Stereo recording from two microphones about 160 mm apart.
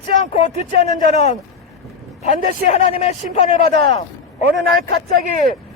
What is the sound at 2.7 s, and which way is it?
Speech, 45° left (ahead or behind).